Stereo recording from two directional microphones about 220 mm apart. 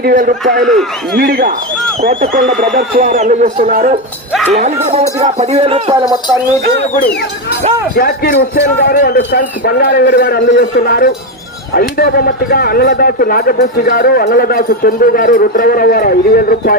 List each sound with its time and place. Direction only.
0.0 s speech: 40° right (ahead or behind)
0.6 s a man's voice: centre (ahead or behind)
1.1 s a man's voice: 45° right (ahead or behind); by 6.1 s 20° right (ahead or behind)
7.9 s speech: 45° left (ahead or behind)